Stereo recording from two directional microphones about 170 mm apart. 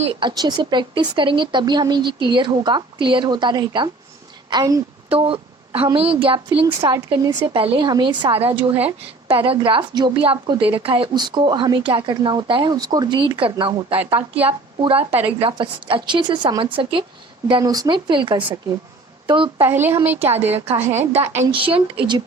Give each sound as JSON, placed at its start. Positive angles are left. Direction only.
{"t": 0.0, "sound": "a woman's voice", "side_deg": -30}
{"t": 5.0, "sound": "a woman's voice", "side_deg": -35}
{"t": 13.9, "sound": "speech", "side_deg": -10}
{"t": 14.4, "sound": "a woman's voice", "side_deg": -35}
{"t": 19.6, "sound": "speech", "side_deg": -15}
{"t": 21.5, "sound": "speech", "side_deg": -30}